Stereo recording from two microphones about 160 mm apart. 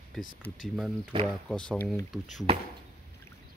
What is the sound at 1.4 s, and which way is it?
Speech, 5° left (ahead or behind).